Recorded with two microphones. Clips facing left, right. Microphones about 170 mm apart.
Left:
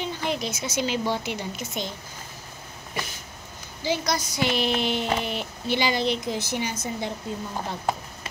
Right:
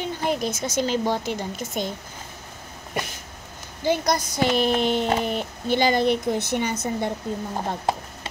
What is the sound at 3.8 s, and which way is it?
Speech, 50° right (ahead or behind).